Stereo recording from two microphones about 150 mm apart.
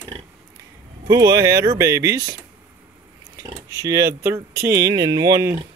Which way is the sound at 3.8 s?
25° right (ahead or behind).